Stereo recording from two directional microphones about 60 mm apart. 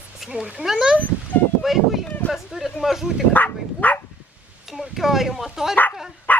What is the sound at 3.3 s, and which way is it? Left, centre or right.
Bow-wow, left.